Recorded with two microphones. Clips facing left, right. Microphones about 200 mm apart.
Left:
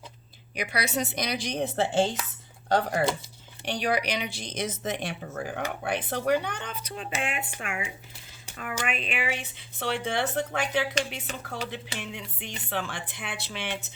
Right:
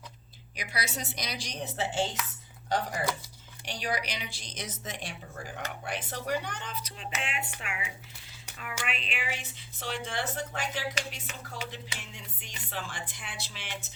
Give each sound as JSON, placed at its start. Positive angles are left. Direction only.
{"t": 0.5, "sound": "speech", "side_deg": 60}